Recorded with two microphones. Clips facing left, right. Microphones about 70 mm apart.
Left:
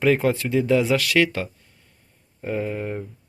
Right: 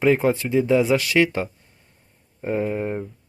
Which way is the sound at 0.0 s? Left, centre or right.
Centre.